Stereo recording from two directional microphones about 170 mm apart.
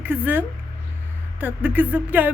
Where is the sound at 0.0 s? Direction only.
10° right (ahead or behind).